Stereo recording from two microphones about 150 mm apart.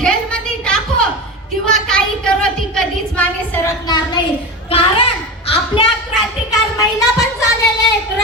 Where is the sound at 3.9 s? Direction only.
30° left (ahead or behind).